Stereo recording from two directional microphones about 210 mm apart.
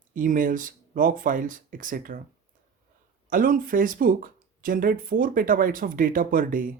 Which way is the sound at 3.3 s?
40° right (ahead or behind).